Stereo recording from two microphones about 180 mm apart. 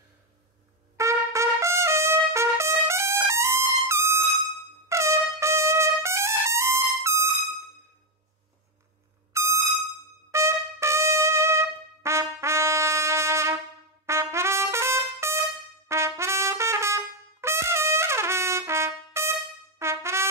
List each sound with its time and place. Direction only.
0.9 s trumpet: 15° right (ahead or behind)
9.3 s music: 15° right (ahead or behind)
10.3 s trumpet: 15° right (ahead or behind)